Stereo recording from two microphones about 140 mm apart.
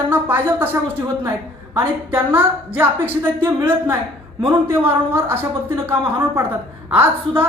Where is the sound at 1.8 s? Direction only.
15° right (ahead or behind).